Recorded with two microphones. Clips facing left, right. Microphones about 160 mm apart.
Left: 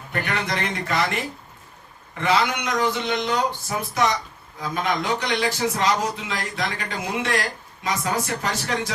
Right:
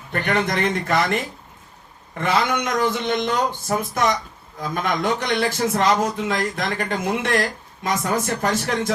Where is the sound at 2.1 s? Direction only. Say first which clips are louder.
Right 1 dB; 50° right (ahead or behind).